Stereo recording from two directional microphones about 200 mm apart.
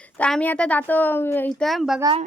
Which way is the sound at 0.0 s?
5° left (ahead or behind).